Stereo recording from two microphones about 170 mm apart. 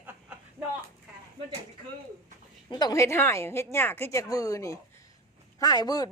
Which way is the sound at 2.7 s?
25° left (ahead or behind).